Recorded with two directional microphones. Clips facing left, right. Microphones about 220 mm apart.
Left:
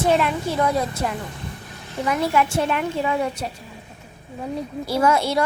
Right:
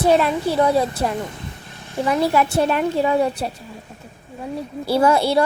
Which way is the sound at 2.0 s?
30° right (ahead or behind).